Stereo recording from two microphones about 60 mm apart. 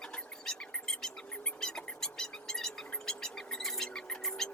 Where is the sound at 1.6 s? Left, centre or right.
Centre.